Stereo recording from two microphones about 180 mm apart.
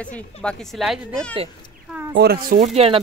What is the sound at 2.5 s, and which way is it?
Speech, 35° right (ahead or behind).